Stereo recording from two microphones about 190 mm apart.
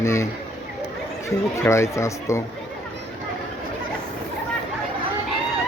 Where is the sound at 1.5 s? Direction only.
15° left (ahead or behind).